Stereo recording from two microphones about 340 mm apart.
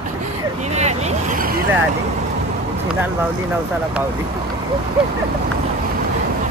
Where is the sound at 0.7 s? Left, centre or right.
Centre.